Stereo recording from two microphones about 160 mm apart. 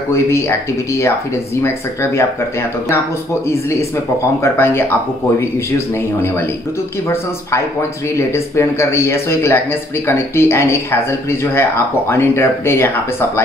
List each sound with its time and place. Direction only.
0.1 s speech: 15° left (ahead or behind)
4.4 s speech: 15° left (ahead or behind)
6.2 s speech: 15° left (ahead or behind)
8.3 s speech: 15° left (ahead or behind)